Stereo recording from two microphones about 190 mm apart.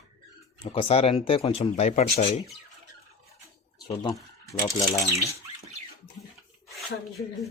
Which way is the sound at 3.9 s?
25° left (ahead or behind).